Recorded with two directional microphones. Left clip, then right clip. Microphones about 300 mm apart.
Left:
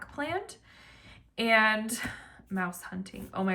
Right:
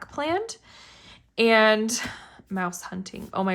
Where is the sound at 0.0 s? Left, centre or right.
Centre.